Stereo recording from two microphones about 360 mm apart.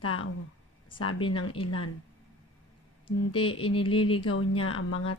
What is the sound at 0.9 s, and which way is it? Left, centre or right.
Speech, left.